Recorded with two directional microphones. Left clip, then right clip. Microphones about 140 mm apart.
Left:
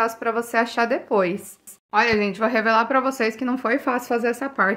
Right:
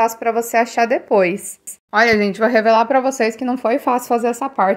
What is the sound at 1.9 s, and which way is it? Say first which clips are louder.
Speech: right 5 dB; 50° right (ahead or behind).